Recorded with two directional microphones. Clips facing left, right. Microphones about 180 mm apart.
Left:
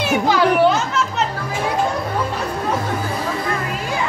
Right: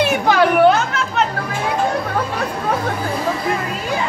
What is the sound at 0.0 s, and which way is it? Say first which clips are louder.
Chatter: right 2 dB; 60° right (ahead or behind).